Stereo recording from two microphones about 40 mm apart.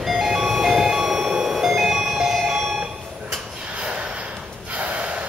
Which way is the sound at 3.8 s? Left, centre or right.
Right.